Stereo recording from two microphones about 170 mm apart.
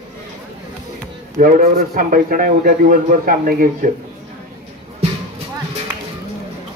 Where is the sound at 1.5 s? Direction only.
45° right (ahead or behind).